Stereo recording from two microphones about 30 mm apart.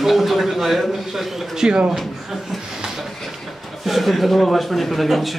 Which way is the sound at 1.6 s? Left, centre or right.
Right.